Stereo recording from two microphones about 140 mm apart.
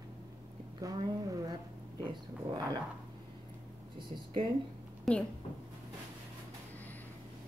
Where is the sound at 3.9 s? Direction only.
35° right (ahead or behind).